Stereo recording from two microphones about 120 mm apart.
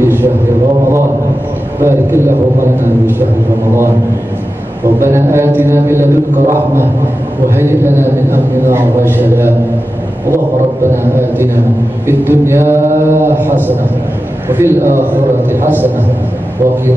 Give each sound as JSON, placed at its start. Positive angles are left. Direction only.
{"t": 0.0, "sound": "a sound", "side_deg": -20}
{"t": 1.8, "sound": "a man's voice", "side_deg": -20}
{"t": 5.0, "sound": "a man's voice", "side_deg": -20}